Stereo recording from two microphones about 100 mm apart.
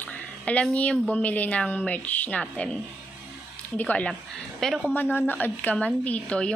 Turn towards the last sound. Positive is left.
turn(degrees=10)  # may be behind; listen again after turning